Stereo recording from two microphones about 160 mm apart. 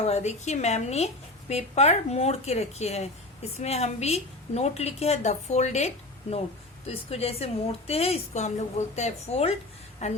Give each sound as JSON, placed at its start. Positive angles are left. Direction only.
{"t": 0.0, "sound": "a woman's voice", "side_deg": 45}